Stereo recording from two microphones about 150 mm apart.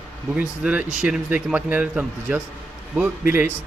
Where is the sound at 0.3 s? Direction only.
5° right (ahead or behind).